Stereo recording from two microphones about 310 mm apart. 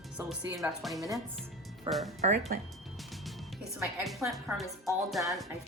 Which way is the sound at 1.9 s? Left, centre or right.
Centre.